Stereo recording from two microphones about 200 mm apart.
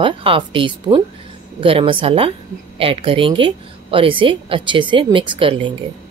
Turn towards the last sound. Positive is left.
turn(degrees=-25)  # may be behind; listen again after turning